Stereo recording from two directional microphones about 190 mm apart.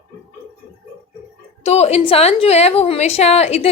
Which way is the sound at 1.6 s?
35° left (ahead or behind).